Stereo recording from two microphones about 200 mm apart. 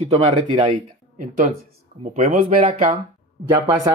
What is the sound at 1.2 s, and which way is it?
Speech, 40° right (ahead or behind).